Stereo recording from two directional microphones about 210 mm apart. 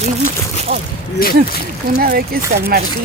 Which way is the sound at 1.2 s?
45° left (ahead or behind).